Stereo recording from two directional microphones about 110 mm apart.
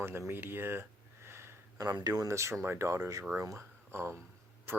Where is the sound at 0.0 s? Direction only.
20° right (ahead or behind).